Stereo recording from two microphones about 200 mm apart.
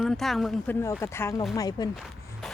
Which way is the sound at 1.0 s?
10° left (ahead or behind).